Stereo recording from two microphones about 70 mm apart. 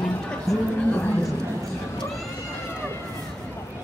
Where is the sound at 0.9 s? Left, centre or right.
Left.